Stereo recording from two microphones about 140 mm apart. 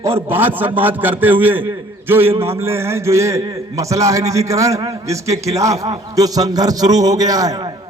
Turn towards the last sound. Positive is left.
turn(degrees=-25)  # may be behind; listen again after turning